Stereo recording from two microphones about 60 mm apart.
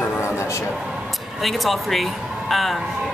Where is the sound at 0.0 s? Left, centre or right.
Left.